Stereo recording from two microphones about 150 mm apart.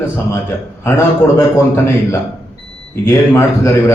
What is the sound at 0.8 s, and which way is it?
Speech, 20° left (ahead or behind).